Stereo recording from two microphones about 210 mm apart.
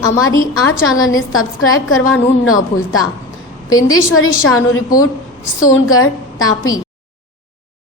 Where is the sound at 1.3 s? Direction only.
80° left.